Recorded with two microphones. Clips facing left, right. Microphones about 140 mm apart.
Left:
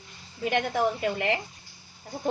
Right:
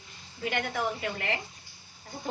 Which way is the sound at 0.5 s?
25° left (ahead or behind).